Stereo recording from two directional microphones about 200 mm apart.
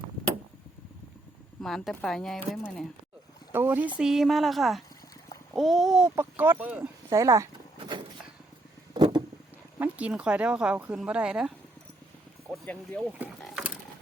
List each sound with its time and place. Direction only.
1.6 s speech: centre (ahead or behind)
3.5 s speech: 10° right (ahead or behind)
8.9 s a sound: 20° right (ahead or behind)
9.7 s speech: 10° right (ahead or behind)
12.5 s speech: 5° left (ahead or behind)
13.1 s a sound: centre (ahead or behind)